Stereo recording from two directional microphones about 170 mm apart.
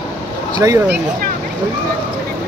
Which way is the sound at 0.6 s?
20° right (ahead or behind).